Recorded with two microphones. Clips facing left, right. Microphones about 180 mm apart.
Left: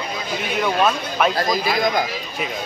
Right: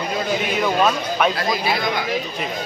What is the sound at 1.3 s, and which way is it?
Speech, 40° left (ahead or behind).